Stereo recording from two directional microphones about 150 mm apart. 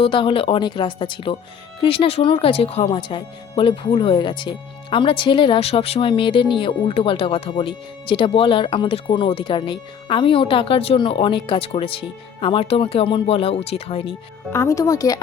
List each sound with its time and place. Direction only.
0.0 s speech: 35° left (ahead or behind)
14.5 s speech: 20° left (ahead or behind)